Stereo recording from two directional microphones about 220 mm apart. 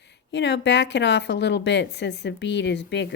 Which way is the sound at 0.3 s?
55° left (ahead or behind).